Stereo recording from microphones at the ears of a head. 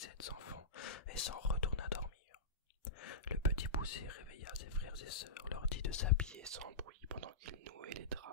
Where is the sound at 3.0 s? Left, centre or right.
Left.